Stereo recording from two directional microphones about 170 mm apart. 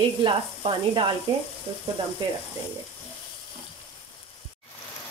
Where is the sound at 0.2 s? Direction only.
30° right (ahead or behind).